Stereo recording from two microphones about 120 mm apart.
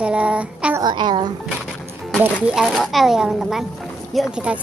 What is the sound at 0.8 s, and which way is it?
Speech, 40° right (ahead or behind).